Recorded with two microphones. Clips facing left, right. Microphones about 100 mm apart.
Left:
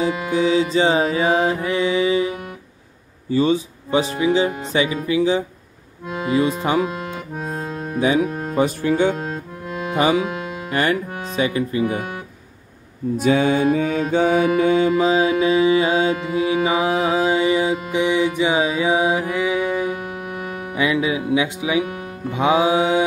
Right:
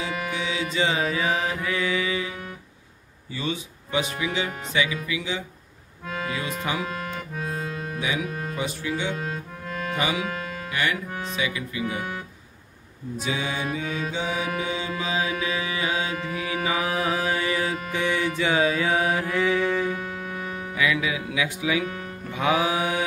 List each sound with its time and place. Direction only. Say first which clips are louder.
0.3 s speech: left 11 dB; 35° left (ahead or behind)
6.0 s speech: left 10 dB; 20° left (ahead or behind)
6.9 s accordion: left 3 dB; 20° left (ahead or behind)
7.4 s music: left 4 dB; 30° left (ahead or behind)
8.5 s mantra: left 13 dB; 50° left (ahead or behind)
9.1 s music: left 4 dB; 25° left (ahead or behind)
9.9 s speech: left 10 dB; 40° left (ahead or behind)
10.2 s music: left 5 dB; 20° left (ahead or behind)
10.7 s speech: left 7 dB; 40° left (ahead or behind)
13.2 s mantra: left 12 dB; 55° left (ahead or behind)
15.0 s mantra: left 10 dB; 35° left (ahead or behind)